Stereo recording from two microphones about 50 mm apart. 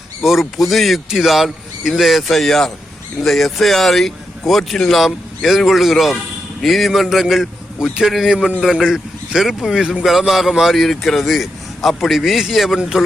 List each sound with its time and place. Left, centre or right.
0.2 s a man's voice: centre
8.3 s a man's voice: centre